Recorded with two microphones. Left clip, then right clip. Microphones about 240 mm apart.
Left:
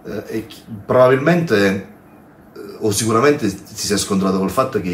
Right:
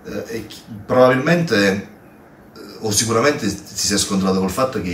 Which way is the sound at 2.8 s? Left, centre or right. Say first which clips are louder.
Left 2 dB; left.